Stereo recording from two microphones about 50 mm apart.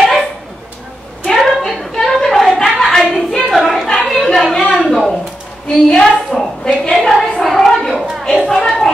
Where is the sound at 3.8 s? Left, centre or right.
Centre.